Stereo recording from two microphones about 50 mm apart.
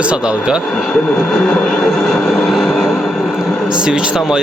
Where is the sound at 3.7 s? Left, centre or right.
Centre.